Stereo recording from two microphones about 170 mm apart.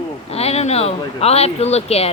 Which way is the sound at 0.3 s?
35° left (ahead or behind).